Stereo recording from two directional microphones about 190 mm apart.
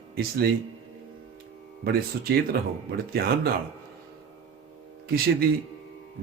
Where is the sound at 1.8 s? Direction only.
55° right (ahead or behind).